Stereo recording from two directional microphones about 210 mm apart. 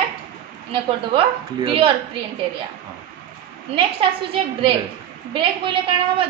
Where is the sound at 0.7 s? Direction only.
25° right (ahead or behind).